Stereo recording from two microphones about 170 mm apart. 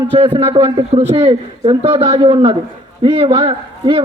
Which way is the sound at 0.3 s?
35° right (ahead or behind).